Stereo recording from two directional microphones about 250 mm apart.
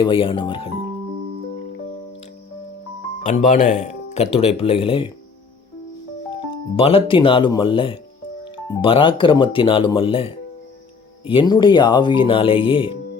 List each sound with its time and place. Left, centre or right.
0.0 s speech: left
3.2 s speech: left
6.3 s speech: left